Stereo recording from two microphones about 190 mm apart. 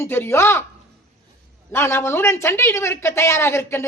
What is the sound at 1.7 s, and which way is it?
Speech, 15° left (ahead or behind).